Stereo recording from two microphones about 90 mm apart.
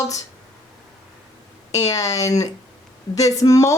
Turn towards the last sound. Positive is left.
turn(degrees=40)  # may be behind; listen again after turning